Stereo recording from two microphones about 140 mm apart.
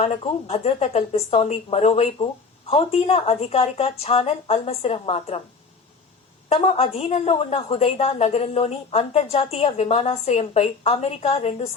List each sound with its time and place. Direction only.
0.0 s a woman's voice: 45° left (ahead or behind)
6.5 s a woman's voice: 45° left (ahead or behind)